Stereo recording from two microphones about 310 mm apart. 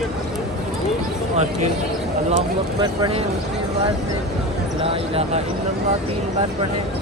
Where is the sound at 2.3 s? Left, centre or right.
Centre.